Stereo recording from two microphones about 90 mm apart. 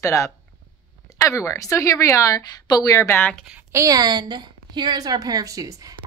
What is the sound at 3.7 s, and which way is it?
A woman's voice, 40° right (ahead or behind).